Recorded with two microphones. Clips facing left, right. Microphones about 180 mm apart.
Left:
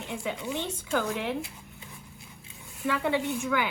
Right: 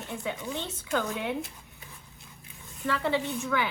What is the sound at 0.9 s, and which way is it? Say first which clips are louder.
Speech: left 1 dB; centre (ahead or behind).